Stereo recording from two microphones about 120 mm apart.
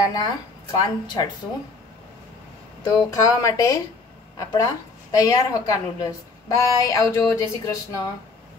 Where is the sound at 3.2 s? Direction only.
30° left (ahead or behind).